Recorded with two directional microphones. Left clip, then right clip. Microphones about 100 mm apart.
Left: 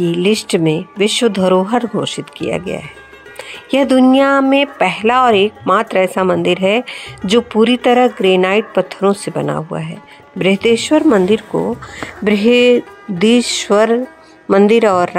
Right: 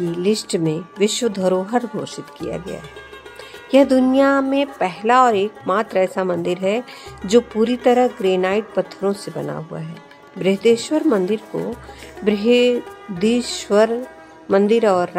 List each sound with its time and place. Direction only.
0.0 s speech: 35° left (ahead or behind)